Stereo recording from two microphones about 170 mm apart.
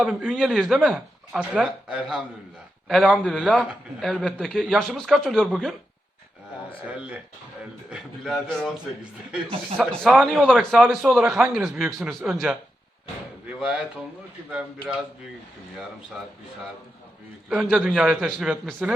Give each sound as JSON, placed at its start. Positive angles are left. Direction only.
{"t": 0.0, "sound": "a man's voice", "side_deg": 0}
{"t": 6.8, "sound": "a man's voice", "side_deg": -5}
{"t": 9.7, "sound": "a man's voice", "side_deg": 5}
{"t": 17.5, "sound": "a man's voice", "side_deg": 0}